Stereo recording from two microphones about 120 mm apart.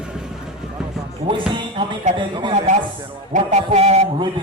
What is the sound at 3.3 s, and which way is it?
Music, 70° right (ahead or behind).